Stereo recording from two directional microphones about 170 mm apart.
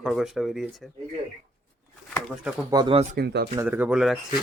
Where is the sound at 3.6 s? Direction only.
10° right (ahead or behind).